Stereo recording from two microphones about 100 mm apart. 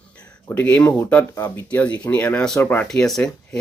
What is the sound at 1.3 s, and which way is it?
Speech, 25° left (ahead or behind).